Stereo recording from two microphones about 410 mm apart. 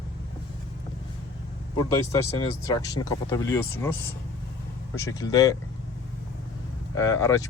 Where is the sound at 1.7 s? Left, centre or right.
Centre.